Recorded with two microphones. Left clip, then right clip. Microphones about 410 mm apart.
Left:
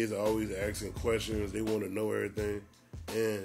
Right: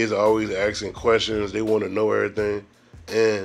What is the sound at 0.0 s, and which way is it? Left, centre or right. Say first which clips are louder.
Speech: right 12 dB; left.